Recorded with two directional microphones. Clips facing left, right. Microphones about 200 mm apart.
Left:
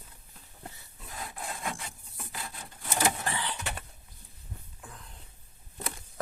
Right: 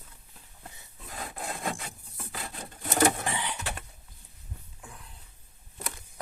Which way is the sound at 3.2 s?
15° right (ahead or behind).